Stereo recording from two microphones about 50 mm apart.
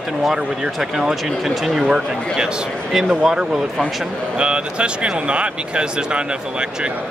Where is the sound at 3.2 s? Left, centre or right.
Centre.